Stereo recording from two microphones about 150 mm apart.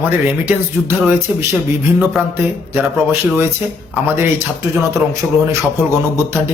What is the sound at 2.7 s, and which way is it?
Speech, 15° right (ahead or behind).